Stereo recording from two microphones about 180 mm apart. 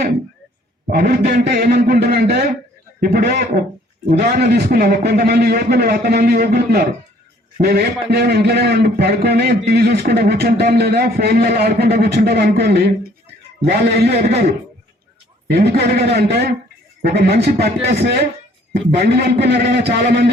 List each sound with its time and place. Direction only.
0.9 s a man's voice: 60° right (ahead or behind)
15.4 s a man's voice: 65° right (ahead or behind)